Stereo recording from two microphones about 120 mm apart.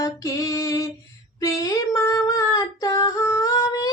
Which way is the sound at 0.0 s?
30° left (ahead or behind).